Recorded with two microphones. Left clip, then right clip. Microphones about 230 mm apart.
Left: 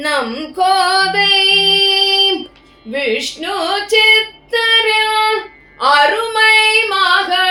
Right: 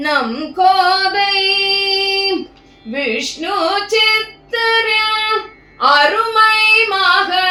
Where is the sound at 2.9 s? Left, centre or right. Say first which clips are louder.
Left 1 dB; left.